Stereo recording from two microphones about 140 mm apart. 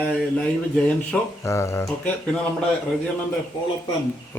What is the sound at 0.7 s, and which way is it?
Speech, 5° left (ahead or behind).